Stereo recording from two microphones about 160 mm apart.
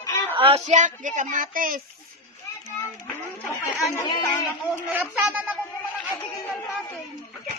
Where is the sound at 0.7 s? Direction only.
50° right (ahead or behind).